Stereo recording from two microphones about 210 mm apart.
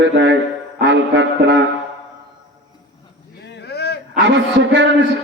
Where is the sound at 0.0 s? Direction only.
60° right (ahead or behind).